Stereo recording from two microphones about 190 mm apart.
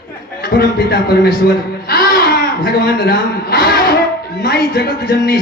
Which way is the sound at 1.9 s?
55° left (ahead or behind).